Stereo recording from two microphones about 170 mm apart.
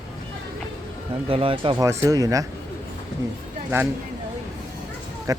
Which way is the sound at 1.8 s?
15° right (ahead or behind).